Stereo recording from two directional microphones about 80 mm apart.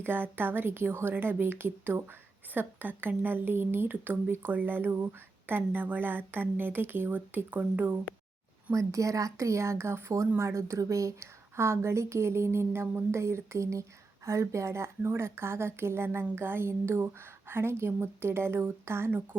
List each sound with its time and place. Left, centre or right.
0.0 s speech: right
8.7 s a woman's voice: right